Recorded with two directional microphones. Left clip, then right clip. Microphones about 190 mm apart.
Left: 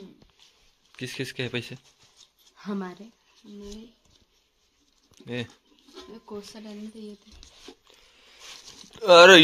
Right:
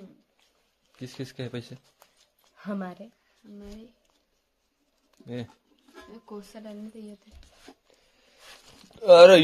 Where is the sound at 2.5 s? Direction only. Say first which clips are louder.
Left 1 dB; 45° right (ahead or behind).